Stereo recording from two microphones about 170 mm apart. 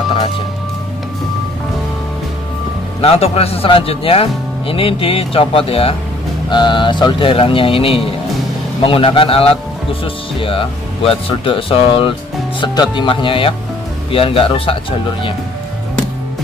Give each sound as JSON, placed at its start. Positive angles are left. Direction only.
{"t": 3.0, "sound": "speech", "side_deg": 35}